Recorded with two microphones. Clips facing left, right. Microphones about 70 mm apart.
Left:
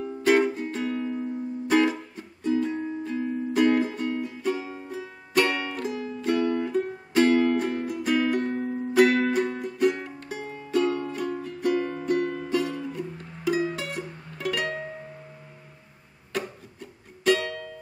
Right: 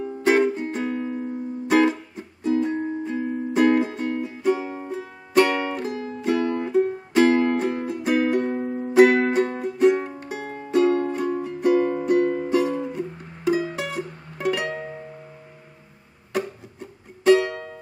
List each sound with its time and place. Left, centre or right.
0.0 s music: right
4.6 s music: right
10.9 s music: right
11.1 s music: centre
16.3 s music: right